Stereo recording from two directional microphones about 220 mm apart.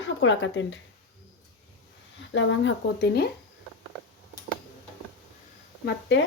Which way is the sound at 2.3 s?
55° left (ahead or behind).